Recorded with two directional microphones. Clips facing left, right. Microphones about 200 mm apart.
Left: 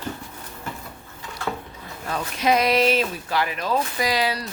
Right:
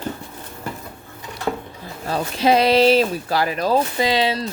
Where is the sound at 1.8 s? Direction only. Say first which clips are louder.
Right 5 dB; 30° right (ahead or behind).